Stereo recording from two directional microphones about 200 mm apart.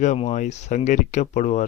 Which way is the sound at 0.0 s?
35° left (ahead or behind).